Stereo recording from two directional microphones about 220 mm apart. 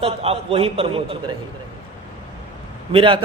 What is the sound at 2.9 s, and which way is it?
Speech, 25° right (ahead or behind).